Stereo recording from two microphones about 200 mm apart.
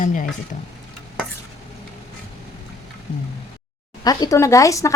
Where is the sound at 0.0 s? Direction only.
40° left (ahead or behind).